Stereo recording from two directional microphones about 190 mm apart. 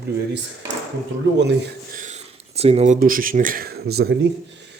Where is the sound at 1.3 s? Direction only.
65° right (ahead or behind).